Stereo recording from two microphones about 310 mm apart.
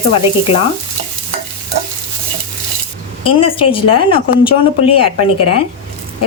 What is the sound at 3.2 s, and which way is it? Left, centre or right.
Speech, centre.